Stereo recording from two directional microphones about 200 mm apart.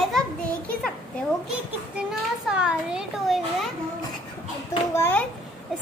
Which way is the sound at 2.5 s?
5° right (ahead or behind).